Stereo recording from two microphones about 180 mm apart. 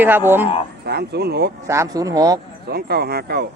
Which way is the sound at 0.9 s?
65° right (ahead or behind).